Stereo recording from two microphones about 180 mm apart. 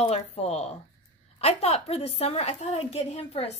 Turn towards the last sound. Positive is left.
turn(degrees=35)  # may be behind; listen again after turning